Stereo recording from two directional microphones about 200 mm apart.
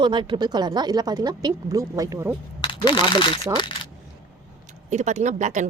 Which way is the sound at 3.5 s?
25° left (ahead or behind).